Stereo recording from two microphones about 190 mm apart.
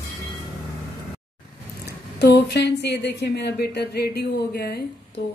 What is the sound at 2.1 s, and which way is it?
Speech, 60° left (ahead or behind).